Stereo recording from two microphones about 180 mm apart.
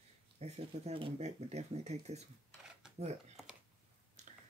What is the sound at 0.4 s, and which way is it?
Speech, 35° right (ahead or behind).